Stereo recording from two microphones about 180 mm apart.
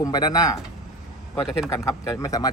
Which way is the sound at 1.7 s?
20° left (ahead or behind).